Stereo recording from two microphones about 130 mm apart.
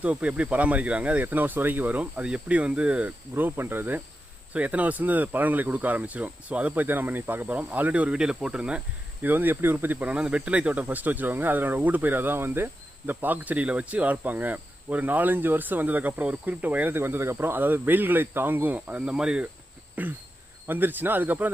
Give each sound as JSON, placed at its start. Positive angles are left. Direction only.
{"t": 0.0, "sound": "speech", "side_deg": -10}